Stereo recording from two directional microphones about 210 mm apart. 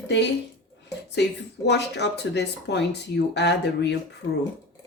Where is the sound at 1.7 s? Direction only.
55° left (ahead or behind).